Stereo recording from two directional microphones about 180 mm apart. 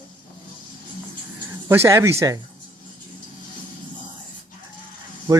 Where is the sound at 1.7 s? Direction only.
15° right (ahead or behind).